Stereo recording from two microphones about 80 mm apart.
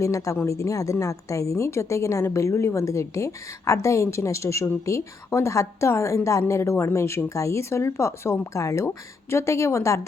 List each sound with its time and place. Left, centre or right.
0.0 s speech: left